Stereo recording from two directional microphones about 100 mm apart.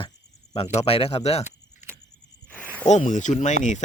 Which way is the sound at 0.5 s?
90° left.